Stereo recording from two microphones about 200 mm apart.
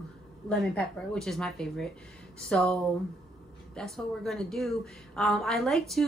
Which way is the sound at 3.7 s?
Centre (ahead or behind).